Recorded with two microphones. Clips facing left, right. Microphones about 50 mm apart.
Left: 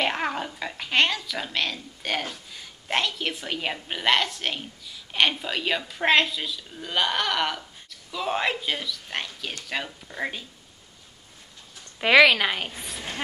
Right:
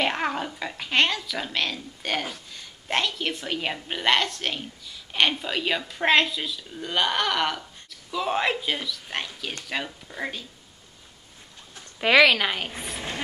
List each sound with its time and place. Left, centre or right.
0.0 s speech: centre
12.0 s speech: centre
12.7 s a woman's voice: right